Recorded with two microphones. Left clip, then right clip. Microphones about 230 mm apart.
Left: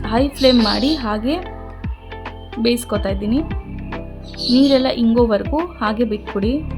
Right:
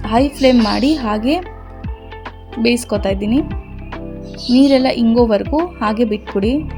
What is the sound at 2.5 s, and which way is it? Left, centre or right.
Speech, centre.